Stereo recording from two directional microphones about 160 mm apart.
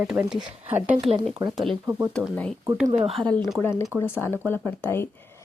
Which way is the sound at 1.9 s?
15° right (ahead or behind).